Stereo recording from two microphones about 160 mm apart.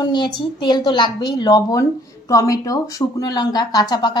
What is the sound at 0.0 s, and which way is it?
A woman's voice, 30° left (ahead or behind).